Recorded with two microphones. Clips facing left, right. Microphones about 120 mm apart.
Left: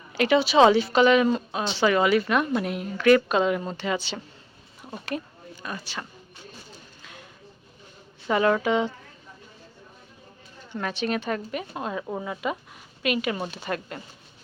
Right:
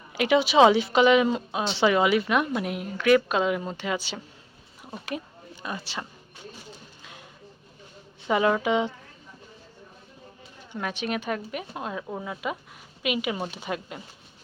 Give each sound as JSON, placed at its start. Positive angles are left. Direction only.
{"t": 0.1, "sound": "a woman's voice", "side_deg": -15}
{"t": 5.6, "sound": "speech", "side_deg": -20}
{"t": 7.0, "sound": "a sound", "side_deg": -15}
{"t": 8.3, "sound": "a woman's voice", "side_deg": -10}
{"t": 10.7, "sound": "a woman's voice", "side_deg": -5}